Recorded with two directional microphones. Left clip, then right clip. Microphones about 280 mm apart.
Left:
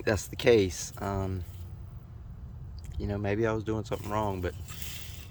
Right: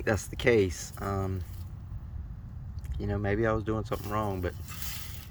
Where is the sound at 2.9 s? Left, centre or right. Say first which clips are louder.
Even; centre.